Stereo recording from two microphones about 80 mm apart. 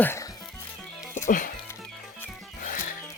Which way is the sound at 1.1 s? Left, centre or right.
Left.